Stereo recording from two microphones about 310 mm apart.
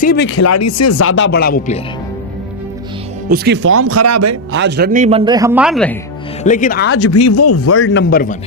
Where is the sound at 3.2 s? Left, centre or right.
Right.